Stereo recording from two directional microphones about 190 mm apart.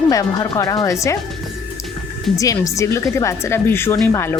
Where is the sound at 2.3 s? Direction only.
15° left (ahead or behind).